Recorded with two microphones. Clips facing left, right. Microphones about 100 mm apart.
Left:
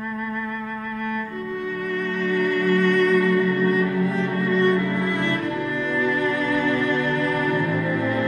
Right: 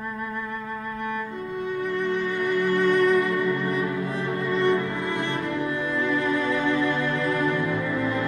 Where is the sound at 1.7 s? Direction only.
20° right (ahead or behind).